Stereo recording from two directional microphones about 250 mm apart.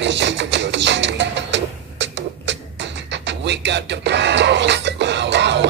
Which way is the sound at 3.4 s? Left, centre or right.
Right.